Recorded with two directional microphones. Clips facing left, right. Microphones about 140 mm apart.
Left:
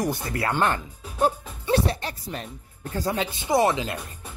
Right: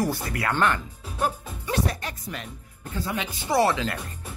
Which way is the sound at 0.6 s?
30° left (ahead or behind).